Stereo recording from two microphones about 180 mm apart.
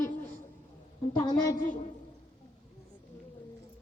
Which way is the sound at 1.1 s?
20° left (ahead or behind).